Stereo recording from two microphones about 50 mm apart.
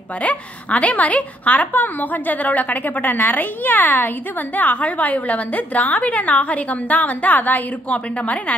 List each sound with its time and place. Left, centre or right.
0.2 s a woman's voice: left